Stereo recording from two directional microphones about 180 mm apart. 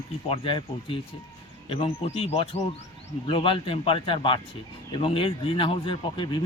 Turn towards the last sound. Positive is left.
turn(degrees=30)  # may be behind; listen again after turning